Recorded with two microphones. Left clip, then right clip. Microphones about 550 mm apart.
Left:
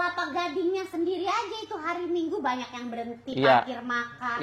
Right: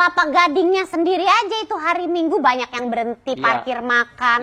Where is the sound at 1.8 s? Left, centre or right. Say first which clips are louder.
Right 9 dB; right.